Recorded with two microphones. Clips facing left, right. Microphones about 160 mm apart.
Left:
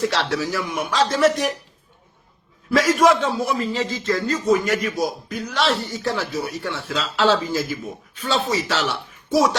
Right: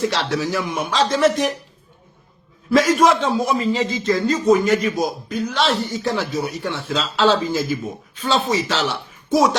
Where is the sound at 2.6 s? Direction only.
25° right (ahead or behind).